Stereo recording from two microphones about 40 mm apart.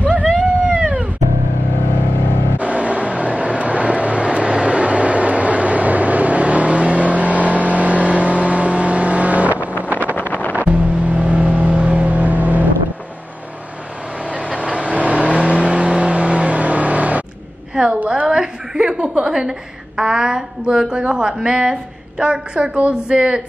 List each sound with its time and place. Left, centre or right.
0.0 s a sound: right
2.6 s vehicle: right
10.1 s wind noise: left
10.5 s vehicle: right
14.3 s vehicle: right
18.2 s a sound: centre
21.1 s a woman's voice: centre